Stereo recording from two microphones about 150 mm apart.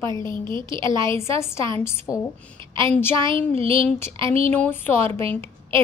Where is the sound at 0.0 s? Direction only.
30° right (ahead or behind).